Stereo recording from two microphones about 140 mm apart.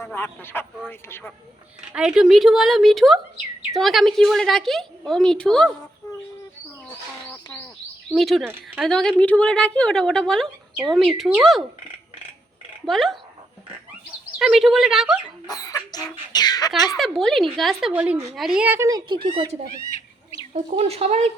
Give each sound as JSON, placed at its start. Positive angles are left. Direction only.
{"t": 0.0, "sound": "speech", "side_deg": 20}
{"t": 1.9, "sound": "a woman's voice", "side_deg": -5}
{"t": 8.1, "sound": "a woman's voice", "side_deg": 0}
{"t": 12.8, "sound": "speech", "side_deg": 0}
{"t": 14.3, "sound": "a woman's voice", "side_deg": -5}
{"t": 15.4, "sound": "chicken", "side_deg": 25}
{"t": 17.0, "sound": "a woman's voice", "side_deg": 0}
{"t": 18.9, "sound": "speech", "side_deg": -30}
{"t": 20.5, "sound": "speech", "side_deg": -45}